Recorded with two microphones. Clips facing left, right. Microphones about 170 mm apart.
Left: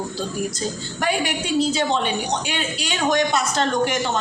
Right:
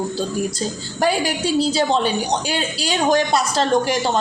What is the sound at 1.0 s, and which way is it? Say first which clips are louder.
A woman's voice: right 4 dB; 35° right (ahead or behind).